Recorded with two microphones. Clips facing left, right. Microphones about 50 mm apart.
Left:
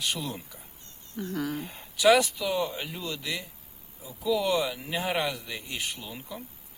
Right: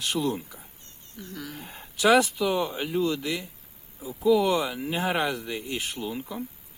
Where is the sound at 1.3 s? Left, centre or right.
Left.